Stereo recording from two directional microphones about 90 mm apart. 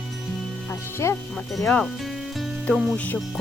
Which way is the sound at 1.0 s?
30° left (ahead or behind).